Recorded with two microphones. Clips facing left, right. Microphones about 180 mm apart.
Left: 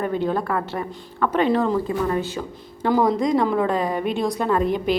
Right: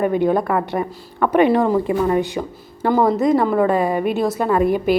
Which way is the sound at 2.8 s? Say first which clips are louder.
Right 3 dB; centre (ahead or behind).